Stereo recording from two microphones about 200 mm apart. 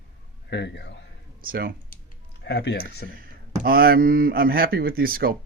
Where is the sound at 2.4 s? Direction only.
55° left (ahead or behind).